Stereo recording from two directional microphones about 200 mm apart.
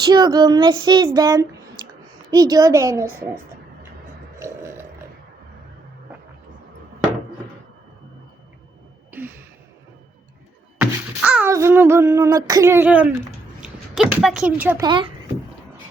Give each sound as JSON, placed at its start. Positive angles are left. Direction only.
{"t": 0.0, "sound": "female singing", "side_deg": -20}
{"t": 2.3, "sound": "a woman's voice", "side_deg": -20}
{"t": 4.4, "sound": "burping", "side_deg": -15}
{"t": 10.8, "sound": "music", "side_deg": -5}
{"t": 13.6, "sound": "a sound", "side_deg": 0}
{"t": 14.8, "sound": "female singing", "side_deg": -25}